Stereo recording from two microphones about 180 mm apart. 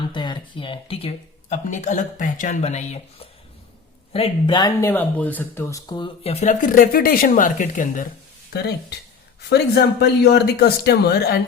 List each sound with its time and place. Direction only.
0.1 s speech: 25° left (ahead or behind)
1.6 s speech: 45° left (ahead or behind)
4.1 s speech: 30° left (ahead or behind)
4.9 s speech: 10° left (ahead or behind)
6.2 s speech: 40° left (ahead or behind)
9.5 s speech: 65° left (ahead or behind)